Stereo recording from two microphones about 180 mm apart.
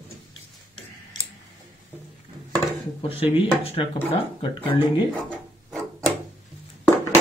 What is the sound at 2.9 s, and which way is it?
Speech, 30° left (ahead or behind).